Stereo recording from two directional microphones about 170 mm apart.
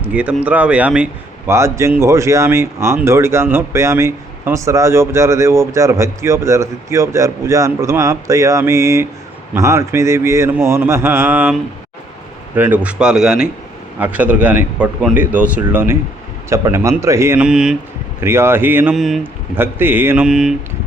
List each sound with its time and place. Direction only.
0.0 s speech: 10° right (ahead or behind)
12.5 s speech: 10° right (ahead or behind)
18.9 s speech: centre (ahead or behind)
19.5 s speech: 10° right (ahead or behind)